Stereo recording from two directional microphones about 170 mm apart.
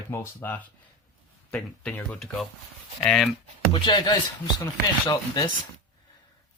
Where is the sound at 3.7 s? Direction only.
25° left (ahead or behind).